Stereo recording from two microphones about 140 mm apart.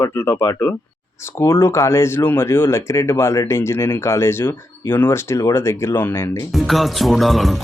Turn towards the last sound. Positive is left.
turn(degrees=0)  # may be behind; listen again after turning